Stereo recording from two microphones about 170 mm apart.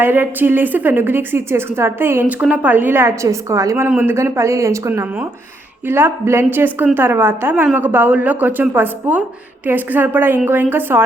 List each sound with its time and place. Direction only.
0.0 s a woman's voice: 10° right (ahead or behind)